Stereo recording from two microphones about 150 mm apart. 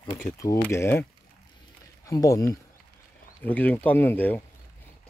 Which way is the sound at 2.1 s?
20° left (ahead or behind).